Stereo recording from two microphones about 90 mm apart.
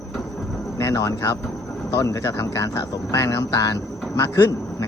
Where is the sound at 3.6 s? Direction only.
40° left (ahead or behind).